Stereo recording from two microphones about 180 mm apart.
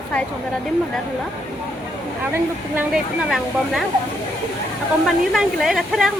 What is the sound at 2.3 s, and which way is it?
Speech, 10° right (ahead or behind).